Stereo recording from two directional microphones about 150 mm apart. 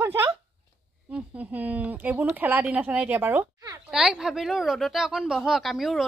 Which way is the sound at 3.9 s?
5° right (ahead or behind).